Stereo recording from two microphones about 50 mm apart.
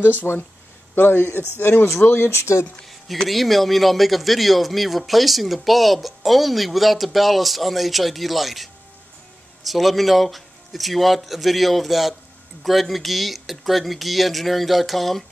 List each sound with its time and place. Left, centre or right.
0.0 s a man's voice: left
3.3 s speech: centre
9.7 s speech: centre